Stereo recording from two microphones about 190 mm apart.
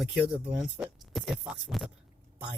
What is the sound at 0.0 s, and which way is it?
Speech, centre (ahead or behind).